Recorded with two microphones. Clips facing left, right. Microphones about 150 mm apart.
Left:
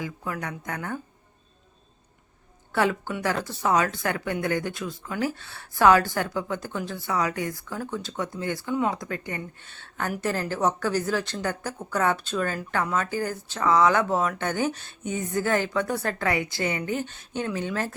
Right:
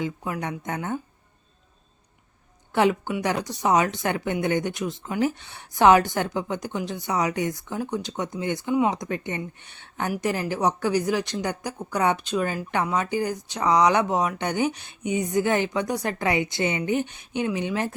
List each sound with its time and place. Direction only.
0.0 s speech: 20° right (ahead or behind)
2.7 s speech: 20° right (ahead or behind)